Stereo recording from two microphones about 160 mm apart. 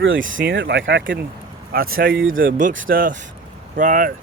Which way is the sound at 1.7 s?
65° right (ahead or behind).